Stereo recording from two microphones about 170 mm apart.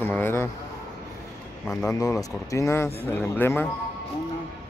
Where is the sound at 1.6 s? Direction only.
15° left (ahead or behind).